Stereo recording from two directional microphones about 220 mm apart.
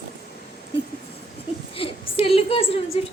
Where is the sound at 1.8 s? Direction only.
25° left (ahead or behind).